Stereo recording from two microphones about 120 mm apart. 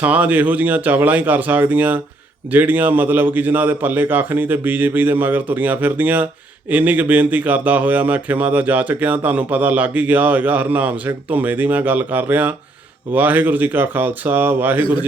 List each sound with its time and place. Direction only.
0.0 s speech: 15° right (ahead or behind)